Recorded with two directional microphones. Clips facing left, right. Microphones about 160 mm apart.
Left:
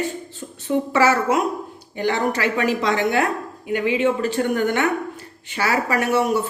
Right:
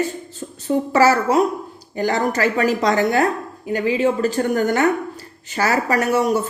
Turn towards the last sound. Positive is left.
turn(degrees=-40)  # may be behind; listen again after turning